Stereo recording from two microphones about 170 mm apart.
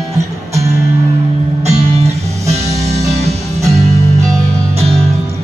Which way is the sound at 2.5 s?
40° right (ahead or behind).